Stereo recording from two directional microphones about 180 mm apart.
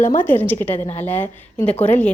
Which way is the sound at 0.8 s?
35° left (ahead or behind).